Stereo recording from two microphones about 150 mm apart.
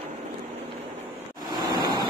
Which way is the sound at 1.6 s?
30° right (ahead or behind).